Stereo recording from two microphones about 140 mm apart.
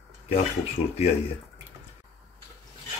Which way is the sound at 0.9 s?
45° left (ahead or behind).